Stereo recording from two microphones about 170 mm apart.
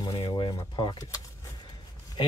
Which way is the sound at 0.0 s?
20° left (ahead or behind).